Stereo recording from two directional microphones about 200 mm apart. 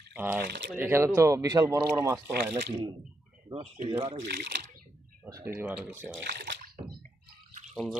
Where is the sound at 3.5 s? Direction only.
25° right (ahead or behind).